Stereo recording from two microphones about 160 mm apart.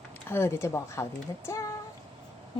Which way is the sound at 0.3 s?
15° left (ahead or behind).